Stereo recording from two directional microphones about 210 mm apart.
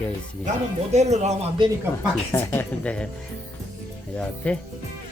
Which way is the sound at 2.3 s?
10° left (ahead or behind).